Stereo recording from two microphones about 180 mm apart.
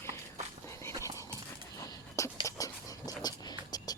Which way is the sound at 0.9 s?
15° right (ahead or behind).